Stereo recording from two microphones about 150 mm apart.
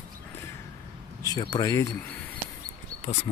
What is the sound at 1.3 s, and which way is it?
Speech, 25° left (ahead or behind).